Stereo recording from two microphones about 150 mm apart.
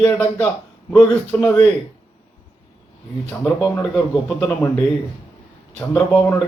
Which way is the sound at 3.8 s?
Centre (ahead or behind).